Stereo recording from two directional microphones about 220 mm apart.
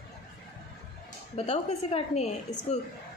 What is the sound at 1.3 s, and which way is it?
A woman's voice, 30° left (ahead or behind).